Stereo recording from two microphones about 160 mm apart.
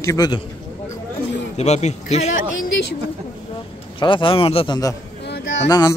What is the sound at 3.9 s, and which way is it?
Speech, 30° left (ahead or behind).